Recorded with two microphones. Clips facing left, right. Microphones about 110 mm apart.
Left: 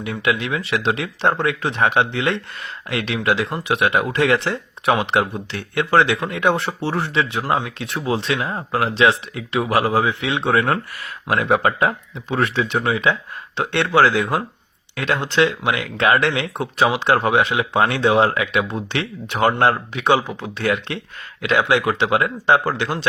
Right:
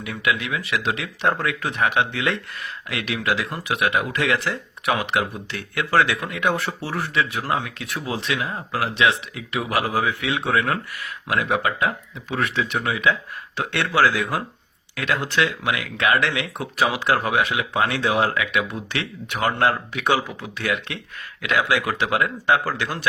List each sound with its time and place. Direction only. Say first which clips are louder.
0.0 s speech: left 3 dB; 30° left (ahead or behind)